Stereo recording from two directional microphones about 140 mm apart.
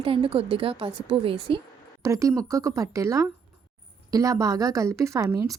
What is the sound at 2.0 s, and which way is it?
A woman's voice, 25° right (ahead or behind).